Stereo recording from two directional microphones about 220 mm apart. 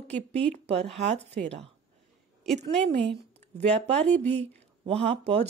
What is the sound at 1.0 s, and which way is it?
Speech, 30° right (ahead or behind).